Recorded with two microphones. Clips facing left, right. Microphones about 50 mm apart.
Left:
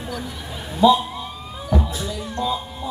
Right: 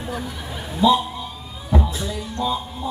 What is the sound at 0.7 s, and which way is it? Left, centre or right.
Mantra, centre.